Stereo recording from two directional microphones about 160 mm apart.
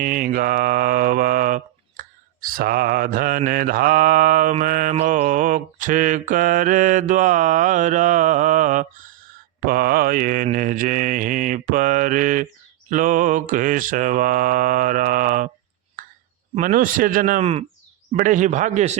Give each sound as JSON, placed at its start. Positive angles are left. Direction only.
{"t": 0.0, "sound": "mantra", "side_deg": -60}
{"t": 9.6, "sound": "mantra", "side_deg": -65}
{"t": 16.0, "sound": "a sound", "side_deg": -55}
{"t": 16.6, "sound": "mantra", "side_deg": -60}
{"t": 17.4, "sound": "speech", "side_deg": -40}
{"t": 18.2, "sound": "mantra", "side_deg": -55}